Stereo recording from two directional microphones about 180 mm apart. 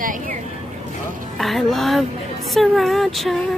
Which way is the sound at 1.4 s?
Centre (ahead or behind).